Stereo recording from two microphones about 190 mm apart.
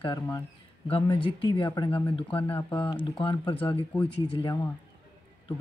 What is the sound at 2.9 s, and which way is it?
Speech, 25° left (ahead or behind).